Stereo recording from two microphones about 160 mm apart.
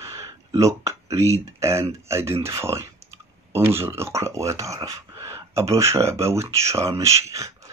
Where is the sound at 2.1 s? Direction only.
15° right (ahead or behind).